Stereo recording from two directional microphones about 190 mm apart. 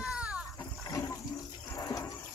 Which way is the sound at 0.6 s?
15° left (ahead or behind).